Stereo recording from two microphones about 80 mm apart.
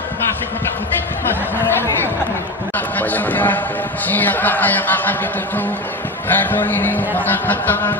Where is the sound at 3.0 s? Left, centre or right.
Left.